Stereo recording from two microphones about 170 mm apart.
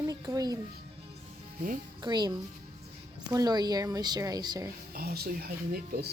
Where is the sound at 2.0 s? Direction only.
25° right (ahead or behind).